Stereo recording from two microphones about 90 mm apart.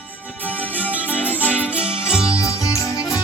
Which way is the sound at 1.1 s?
20° left (ahead or behind).